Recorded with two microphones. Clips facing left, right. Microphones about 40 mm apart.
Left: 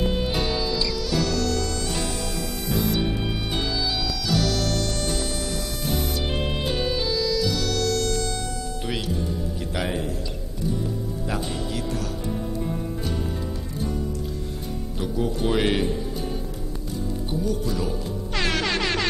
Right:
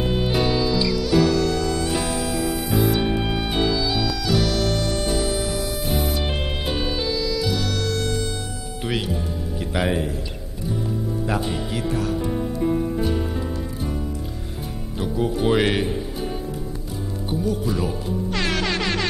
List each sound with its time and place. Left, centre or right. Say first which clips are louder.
0.0 s music: right 3 dB; centre
8.8 s music: right 4 dB; centre
11.2 s music: right 3 dB; centre
15.0 s speech: right 3 dB; centre
17.3 s speech: right 4 dB; centre
18.3 s music: left 1 dB; centre